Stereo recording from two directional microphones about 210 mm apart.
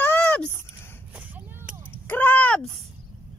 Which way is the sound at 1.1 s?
10° right (ahead or behind).